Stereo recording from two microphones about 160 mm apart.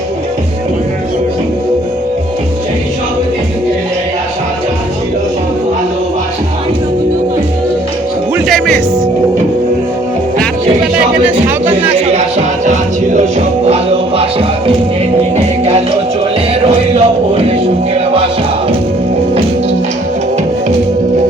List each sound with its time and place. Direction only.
8.4 s music: 5° left (ahead or behind)
11.7 s music: 35° right (ahead or behind)
16.6 s a sound: 40° right (ahead or behind)
17.9 s music: 35° right (ahead or behind)